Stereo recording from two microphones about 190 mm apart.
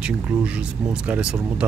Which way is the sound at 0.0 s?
5° right (ahead or behind).